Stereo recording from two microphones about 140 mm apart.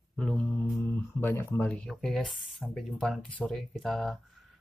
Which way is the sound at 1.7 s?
Centre (ahead or behind).